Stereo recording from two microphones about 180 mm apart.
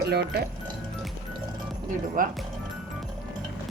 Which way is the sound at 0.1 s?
60° right (ahead or behind).